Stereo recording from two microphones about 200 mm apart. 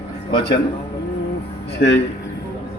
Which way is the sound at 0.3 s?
25° left (ahead or behind).